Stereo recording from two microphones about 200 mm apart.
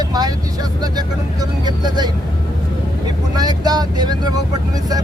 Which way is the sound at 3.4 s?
20° right (ahead or behind).